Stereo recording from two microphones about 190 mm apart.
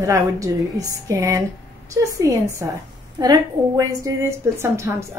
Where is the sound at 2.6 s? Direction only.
15° right (ahead or behind).